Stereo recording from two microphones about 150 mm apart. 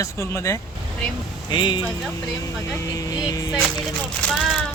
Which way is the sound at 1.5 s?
30° left (ahead or behind).